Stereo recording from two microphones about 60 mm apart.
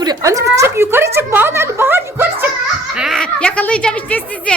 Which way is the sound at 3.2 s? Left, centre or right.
Left.